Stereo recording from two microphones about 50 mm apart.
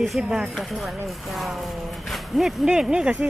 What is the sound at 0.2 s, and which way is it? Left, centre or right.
Speech, centre.